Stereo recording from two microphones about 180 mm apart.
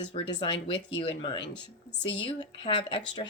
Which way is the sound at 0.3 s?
25° left (ahead or behind).